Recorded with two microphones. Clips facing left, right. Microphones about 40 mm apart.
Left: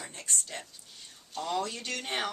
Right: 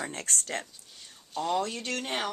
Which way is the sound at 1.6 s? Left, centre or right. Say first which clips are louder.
Right 2 dB; right.